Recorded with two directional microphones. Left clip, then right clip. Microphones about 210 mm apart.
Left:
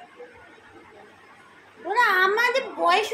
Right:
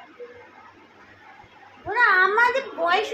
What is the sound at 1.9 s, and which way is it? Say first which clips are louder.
A child's voice: right 2 dB; 20° left (ahead or behind).